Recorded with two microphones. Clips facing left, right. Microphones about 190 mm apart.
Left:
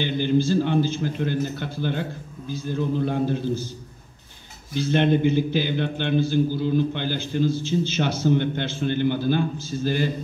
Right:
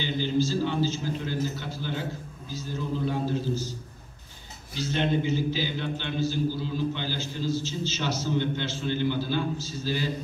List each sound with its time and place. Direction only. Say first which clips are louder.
0.0 s a man's voice: left 5 dB; 55° left (ahead or behind)
4.7 s a man's voice: left 6 dB; 55° left (ahead or behind)